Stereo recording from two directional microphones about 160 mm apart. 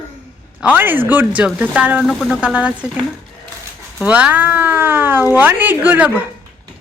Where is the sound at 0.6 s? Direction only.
10° right (ahead or behind).